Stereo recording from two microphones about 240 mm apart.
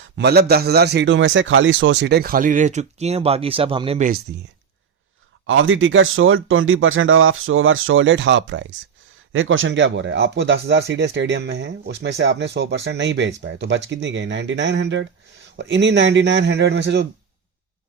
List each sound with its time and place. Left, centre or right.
0.2 s a man's voice: right
5.5 s speech: right